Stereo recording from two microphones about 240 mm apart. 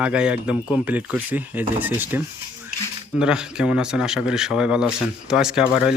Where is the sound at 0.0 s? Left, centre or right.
Centre.